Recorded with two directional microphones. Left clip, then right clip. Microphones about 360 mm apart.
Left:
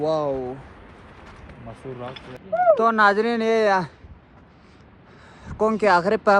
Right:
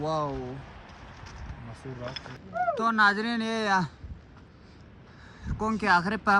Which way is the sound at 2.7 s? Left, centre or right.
Centre.